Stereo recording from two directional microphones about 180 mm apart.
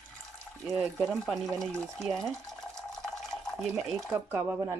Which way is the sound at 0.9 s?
Centre (ahead or behind).